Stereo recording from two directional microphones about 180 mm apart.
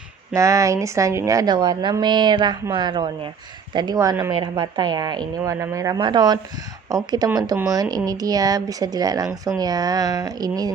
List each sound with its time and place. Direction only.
0.3 s a woman's voice: 15° right (ahead or behind)